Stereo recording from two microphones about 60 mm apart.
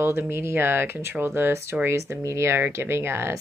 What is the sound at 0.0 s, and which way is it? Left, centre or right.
Speech, right.